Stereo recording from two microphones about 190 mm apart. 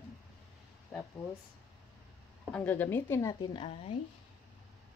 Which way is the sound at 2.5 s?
10° left (ahead or behind).